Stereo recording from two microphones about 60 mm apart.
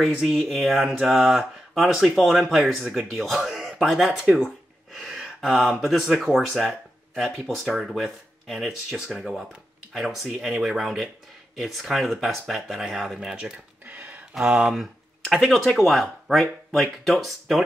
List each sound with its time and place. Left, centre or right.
0.0 s speech: centre
4.9 s gasp: centre
5.4 s speech: centre
13.8 s a sound: right
14.3 s speech: centre